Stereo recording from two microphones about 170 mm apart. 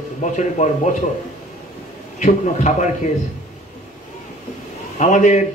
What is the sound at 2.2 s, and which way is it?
Speech, 45° left (ahead or behind).